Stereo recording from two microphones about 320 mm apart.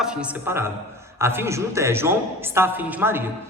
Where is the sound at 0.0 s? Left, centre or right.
Centre.